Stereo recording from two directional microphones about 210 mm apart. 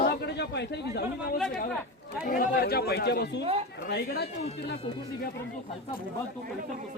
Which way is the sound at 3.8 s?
50° left (ahead or behind).